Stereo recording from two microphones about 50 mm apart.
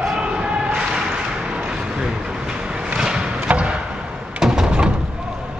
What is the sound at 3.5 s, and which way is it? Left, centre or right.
Chop, right.